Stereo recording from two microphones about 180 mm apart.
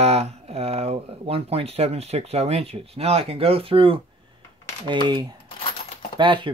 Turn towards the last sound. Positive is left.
turn(degrees=-25)  # may be behind; listen again after turning